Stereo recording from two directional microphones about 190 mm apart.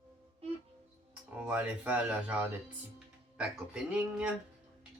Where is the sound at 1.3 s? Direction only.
5° right (ahead or behind).